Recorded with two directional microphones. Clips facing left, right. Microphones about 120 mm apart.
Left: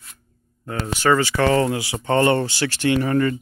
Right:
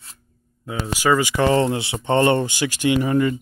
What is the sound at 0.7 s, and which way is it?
Speech, 10° right (ahead or behind).